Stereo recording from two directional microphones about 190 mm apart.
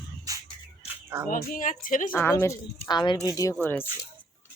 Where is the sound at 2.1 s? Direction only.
10° left (ahead or behind).